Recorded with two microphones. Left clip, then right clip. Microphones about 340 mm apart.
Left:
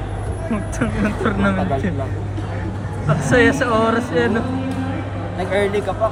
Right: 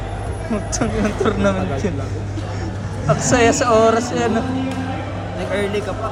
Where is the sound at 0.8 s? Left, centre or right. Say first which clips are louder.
Right 1 dB; centre.